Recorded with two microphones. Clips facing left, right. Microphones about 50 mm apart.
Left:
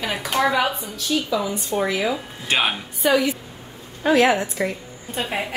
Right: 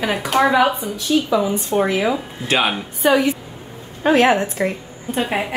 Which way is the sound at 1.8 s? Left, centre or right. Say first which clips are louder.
Right 3 dB; right.